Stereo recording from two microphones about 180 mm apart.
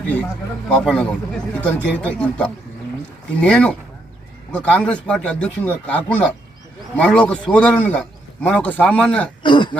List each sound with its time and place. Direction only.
0.7 s a man's voice: 5° left (ahead or behind)
9.4 s speech: 25° left (ahead or behind)